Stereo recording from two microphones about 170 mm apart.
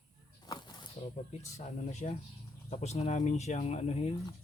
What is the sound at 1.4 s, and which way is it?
Speech, 40° left (ahead or behind).